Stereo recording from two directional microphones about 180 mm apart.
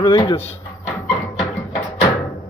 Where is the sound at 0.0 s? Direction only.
20° left (ahead or behind).